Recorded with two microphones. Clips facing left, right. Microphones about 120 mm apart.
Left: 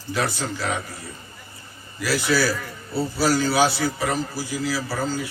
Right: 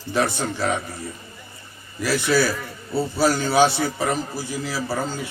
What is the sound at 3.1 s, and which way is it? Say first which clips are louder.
Speech: right 2 dB; 25° right (ahead or behind).